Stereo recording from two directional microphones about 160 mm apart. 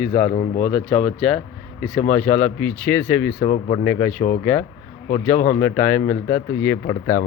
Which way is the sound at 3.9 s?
10° left (ahead or behind).